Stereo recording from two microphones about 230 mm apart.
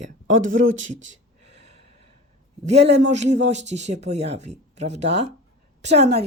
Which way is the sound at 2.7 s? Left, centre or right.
Right.